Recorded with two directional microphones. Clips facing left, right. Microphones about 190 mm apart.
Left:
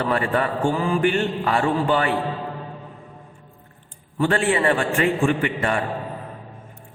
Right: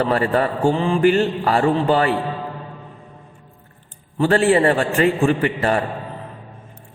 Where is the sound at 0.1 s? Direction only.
35° right (ahead or behind).